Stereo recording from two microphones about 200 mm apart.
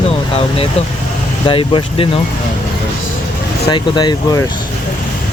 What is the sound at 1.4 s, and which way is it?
Speech, 25° left (ahead or behind).